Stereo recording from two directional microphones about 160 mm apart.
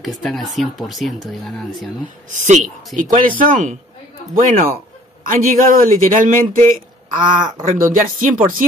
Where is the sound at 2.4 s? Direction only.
50° right (ahead or behind).